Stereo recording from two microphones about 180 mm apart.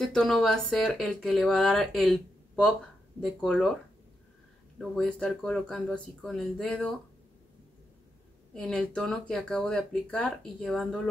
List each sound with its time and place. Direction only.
0.0 s speech: 5° left (ahead or behind)
4.7 s speech: 5° left (ahead or behind)
8.5 s speech: 5° left (ahead or behind)